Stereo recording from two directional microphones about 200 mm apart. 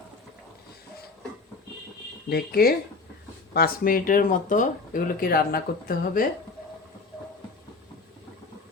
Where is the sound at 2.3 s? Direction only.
50° left (ahead or behind).